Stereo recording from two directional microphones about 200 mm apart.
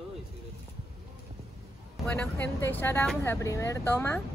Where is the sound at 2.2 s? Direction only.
10° left (ahead or behind).